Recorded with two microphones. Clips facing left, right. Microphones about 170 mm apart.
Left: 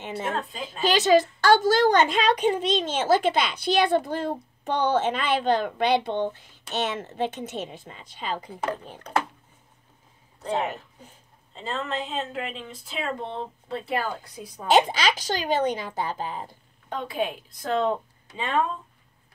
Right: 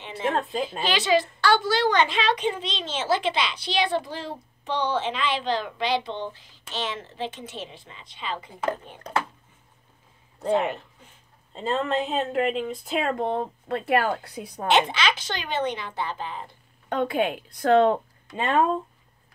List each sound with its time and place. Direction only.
0.7 s a woman's voice: 45° left (ahead or behind)
11.5 s speech: 40° right (ahead or behind); by 14.7 s 65° right (ahead or behind)
14.7 s speech: 40° left (ahead or behind)
16.9 s speech: 65° right (ahead or behind)